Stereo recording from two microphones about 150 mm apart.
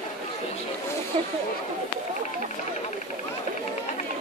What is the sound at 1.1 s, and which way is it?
Speech, 45° right (ahead or behind).